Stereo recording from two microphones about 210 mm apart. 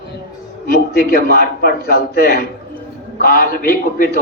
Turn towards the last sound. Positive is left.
turn(degrees=45)  # may be behind; listen again after turning